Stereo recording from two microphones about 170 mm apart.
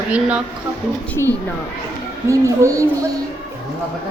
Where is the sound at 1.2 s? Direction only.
15° left (ahead or behind).